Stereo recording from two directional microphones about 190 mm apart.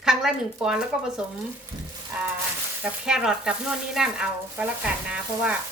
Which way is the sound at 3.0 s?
5° right (ahead or behind).